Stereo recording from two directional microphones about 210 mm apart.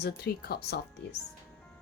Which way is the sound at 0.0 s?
50° left (ahead or behind).